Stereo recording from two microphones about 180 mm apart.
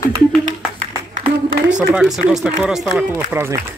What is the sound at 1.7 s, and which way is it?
Speech, 5° right (ahead or behind).